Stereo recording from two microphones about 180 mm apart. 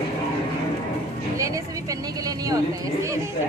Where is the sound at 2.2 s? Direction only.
20° right (ahead or behind).